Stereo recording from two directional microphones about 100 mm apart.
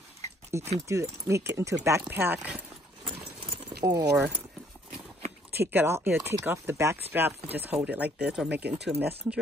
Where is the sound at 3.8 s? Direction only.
40° right (ahead or behind).